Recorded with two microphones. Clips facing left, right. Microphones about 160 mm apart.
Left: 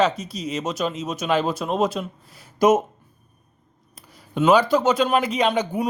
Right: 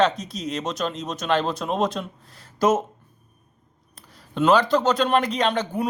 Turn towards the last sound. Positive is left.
turn(degrees=10)  # may be behind; listen again after turning